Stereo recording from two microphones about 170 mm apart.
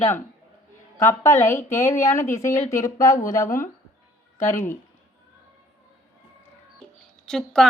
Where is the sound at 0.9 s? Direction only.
15° left (ahead or behind).